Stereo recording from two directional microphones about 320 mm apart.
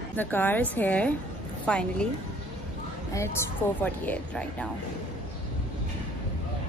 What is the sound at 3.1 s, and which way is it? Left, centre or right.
A woman's voice, centre.